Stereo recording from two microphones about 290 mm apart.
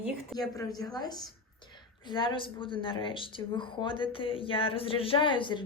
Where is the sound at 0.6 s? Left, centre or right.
Centre.